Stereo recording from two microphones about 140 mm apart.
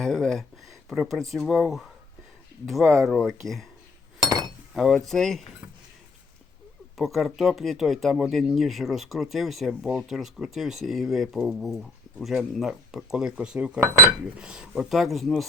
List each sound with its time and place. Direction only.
0.0 s speech: centre (ahead or behind)
4.2 s chink: 30° right (ahead or behind)
4.7 s speech: centre (ahead or behind)
6.9 s speech: centre (ahead or behind)